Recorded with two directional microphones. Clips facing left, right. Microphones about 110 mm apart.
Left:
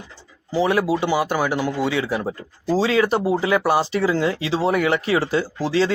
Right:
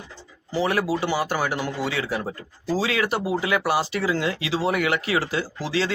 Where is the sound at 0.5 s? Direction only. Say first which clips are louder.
Left 4 dB; 15° left (ahead or behind).